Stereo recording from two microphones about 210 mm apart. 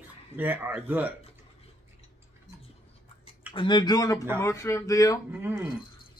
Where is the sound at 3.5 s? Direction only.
20° left (ahead or behind).